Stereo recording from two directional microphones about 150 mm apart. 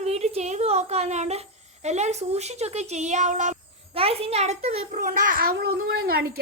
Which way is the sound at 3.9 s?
40° right (ahead or behind).